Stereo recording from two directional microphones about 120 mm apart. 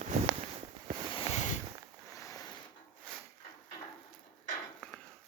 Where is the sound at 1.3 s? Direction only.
90° left.